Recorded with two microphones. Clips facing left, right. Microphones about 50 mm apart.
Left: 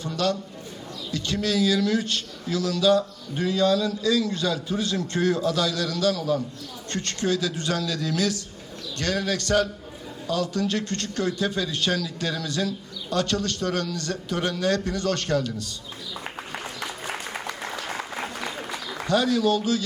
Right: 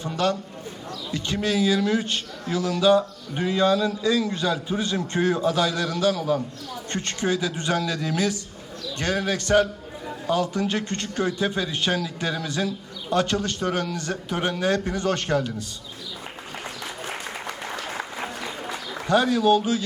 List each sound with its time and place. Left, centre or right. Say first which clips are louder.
0.0 s a man's voice: right 1 dB; right
19.0 s a man's voice: right 2 dB; centre